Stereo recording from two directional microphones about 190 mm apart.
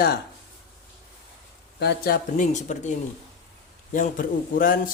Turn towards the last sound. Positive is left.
turn(degrees=45)  # may be behind; listen again after turning